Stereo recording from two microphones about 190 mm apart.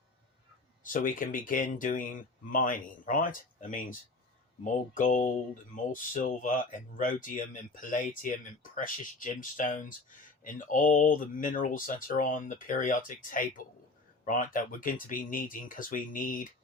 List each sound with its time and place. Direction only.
0.9 s speech: 45° left (ahead or behind)